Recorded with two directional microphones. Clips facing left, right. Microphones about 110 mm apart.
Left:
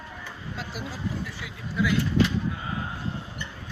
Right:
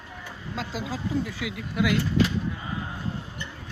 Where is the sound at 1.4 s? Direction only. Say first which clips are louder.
Right 2 dB; 75° right (ahead or behind).